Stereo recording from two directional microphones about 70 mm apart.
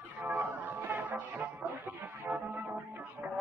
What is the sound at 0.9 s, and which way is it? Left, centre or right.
Music, right.